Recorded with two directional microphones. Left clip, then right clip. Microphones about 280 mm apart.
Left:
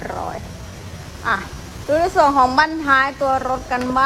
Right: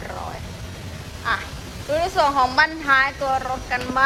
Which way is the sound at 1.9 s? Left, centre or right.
Centre.